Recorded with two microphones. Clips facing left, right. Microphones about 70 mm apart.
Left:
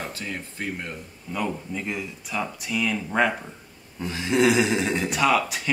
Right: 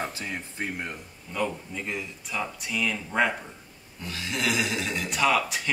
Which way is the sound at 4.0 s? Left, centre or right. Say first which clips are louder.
Left 9 dB; left.